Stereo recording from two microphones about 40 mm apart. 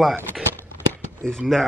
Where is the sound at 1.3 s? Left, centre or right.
Centre.